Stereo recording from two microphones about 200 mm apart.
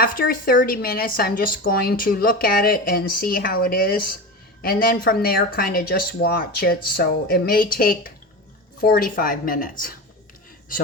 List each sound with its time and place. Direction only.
0.0 s speech: 45° left (ahead or behind)